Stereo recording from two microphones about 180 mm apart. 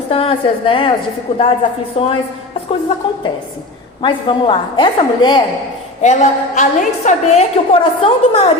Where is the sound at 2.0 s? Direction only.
35° left (ahead or behind).